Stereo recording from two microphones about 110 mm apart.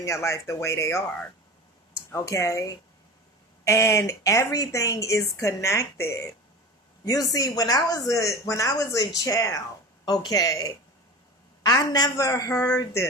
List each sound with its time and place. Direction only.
0.0 s a woman's voice: 25° left (ahead or behind)
2.1 s a woman's voice: 30° left (ahead or behind)